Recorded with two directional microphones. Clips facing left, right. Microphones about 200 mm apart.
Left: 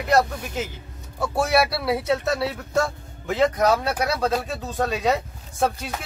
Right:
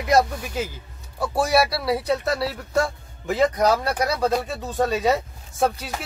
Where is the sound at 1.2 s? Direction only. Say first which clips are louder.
Right 1 dB; 5° right (ahead or behind).